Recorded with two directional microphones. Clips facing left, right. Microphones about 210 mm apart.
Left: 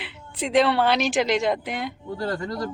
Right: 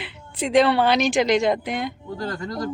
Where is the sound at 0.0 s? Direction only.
Centre (ahead or behind).